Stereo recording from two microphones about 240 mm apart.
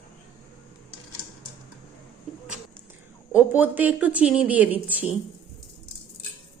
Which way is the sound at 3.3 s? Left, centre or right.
Centre.